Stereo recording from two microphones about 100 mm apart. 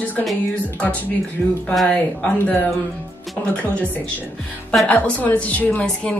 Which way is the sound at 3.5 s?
10° left (ahead or behind).